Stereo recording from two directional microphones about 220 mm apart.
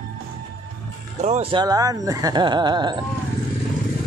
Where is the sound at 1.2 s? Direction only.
30° right (ahead or behind).